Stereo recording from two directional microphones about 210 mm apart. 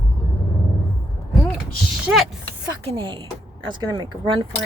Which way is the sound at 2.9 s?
25° right (ahead or behind).